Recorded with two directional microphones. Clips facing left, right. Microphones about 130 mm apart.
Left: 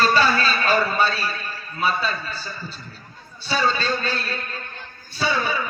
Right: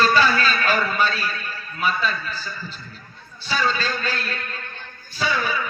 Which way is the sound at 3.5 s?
30° left (ahead or behind).